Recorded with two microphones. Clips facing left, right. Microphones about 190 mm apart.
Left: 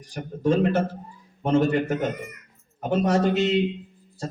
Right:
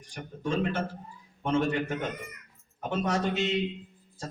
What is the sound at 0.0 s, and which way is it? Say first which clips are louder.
A man's voice: left 10 dB; 40° left (ahead or behind).